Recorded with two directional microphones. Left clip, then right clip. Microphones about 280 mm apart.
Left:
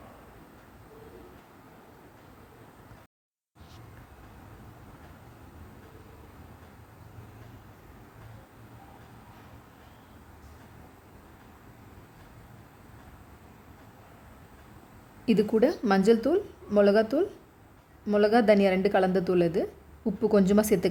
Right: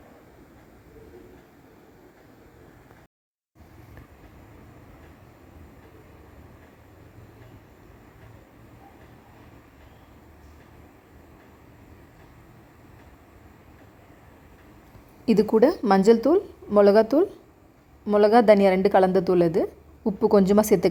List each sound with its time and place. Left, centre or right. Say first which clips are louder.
15.3 s a woman's voice: right 5 dB; centre